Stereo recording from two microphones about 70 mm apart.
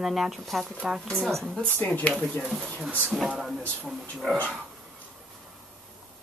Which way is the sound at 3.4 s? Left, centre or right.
Centre.